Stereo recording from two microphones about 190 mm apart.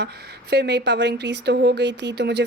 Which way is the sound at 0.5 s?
60° right (ahead or behind).